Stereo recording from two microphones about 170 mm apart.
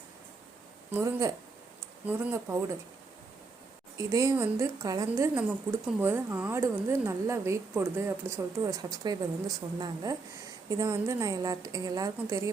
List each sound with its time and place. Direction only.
0.9 s speech: 15° right (ahead or behind)
3.9 s a woman's voice: 20° right (ahead or behind)